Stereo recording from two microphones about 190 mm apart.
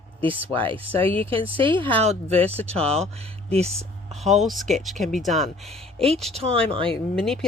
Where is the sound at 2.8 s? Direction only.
35° right (ahead or behind).